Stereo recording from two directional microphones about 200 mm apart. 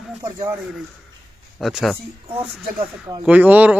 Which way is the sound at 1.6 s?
Centre (ahead or behind).